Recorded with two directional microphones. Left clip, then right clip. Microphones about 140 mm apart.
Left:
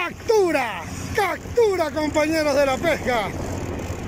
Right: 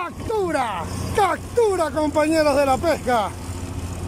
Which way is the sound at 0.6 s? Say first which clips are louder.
Right 2 dB; centre (ahead or behind).